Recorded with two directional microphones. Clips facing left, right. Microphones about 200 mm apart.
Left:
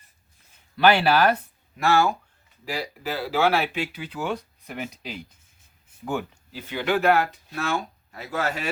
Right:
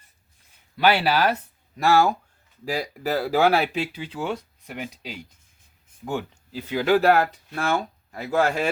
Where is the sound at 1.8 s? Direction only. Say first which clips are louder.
Right 2 dB; 35° right (ahead or behind).